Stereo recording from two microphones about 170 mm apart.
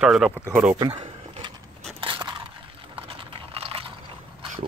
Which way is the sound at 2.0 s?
25° right (ahead or behind).